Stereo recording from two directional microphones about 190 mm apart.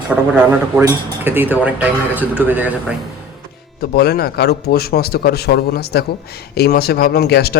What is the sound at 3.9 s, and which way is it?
A man's voice, 55° left (ahead or behind).